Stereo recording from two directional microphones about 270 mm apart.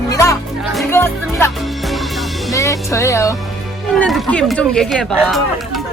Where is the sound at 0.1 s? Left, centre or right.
Centre.